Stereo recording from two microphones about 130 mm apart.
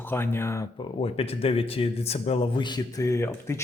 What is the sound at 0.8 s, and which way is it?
Speech, 50° left (ahead or behind).